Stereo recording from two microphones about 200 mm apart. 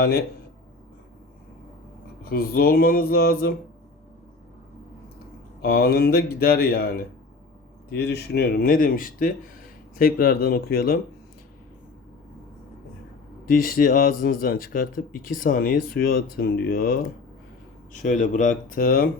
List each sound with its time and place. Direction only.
0.0 s speech: 50° left (ahead or behind)
2.2 s speech: 50° left (ahead or behind)
5.6 s speech: 50° left (ahead or behind)
13.6 s speech: 45° left (ahead or behind)
18.0 s speech: 40° left (ahead or behind)